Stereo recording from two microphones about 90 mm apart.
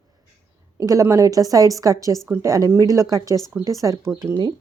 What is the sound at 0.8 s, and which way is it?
Speech, 35° right (ahead or behind).